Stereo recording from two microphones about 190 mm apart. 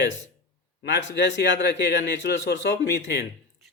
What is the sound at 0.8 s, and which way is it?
Speech, 70° left (ahead or behind).